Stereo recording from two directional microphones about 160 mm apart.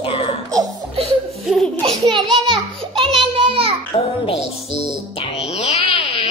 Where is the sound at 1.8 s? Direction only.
30° right (ahead or behind).